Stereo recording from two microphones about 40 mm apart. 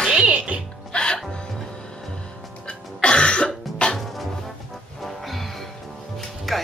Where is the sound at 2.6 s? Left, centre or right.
Left.